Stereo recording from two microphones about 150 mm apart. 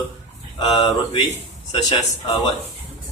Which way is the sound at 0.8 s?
35° left (ahead or behind).